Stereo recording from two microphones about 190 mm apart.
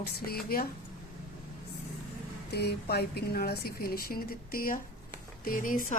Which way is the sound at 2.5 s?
60° left (ahead or behind).